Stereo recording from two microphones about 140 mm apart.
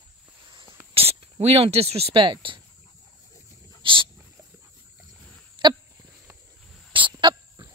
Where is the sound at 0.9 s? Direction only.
45° right (ahead or behind).